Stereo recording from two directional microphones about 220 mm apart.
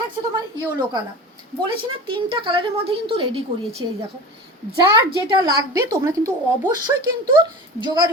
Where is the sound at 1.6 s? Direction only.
25° right (ahead or behind).